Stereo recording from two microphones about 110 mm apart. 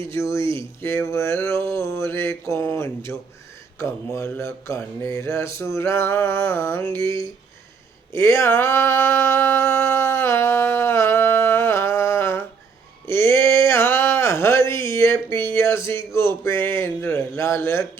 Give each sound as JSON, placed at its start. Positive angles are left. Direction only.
{"t": 0.1, "sound": "mantra", "side_deg": 25}
{"t": 8.1, "sound": "a sound", "side_deg": 25}
{"t": 15.5, "sound": "mantra", "side_deg": 25}